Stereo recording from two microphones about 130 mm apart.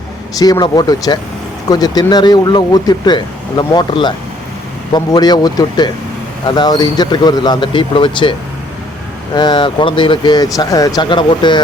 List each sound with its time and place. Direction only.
0.3 s speech: 30° left (ahead or behind)
11.1 s speech: 40° left (ahead or behind)